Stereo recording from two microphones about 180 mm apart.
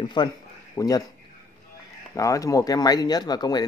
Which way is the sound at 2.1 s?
20° left (ahead or behind).